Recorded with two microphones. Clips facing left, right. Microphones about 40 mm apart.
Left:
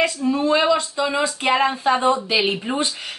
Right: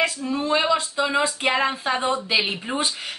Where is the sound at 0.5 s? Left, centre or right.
Centre.